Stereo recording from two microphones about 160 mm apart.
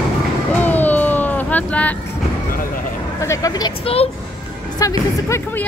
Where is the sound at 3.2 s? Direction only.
20° left (ahead or behind).